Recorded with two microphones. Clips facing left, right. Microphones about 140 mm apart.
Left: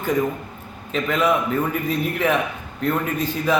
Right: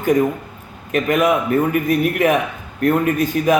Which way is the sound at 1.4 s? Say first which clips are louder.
Right 6 dB; 70° right (ahead or behind).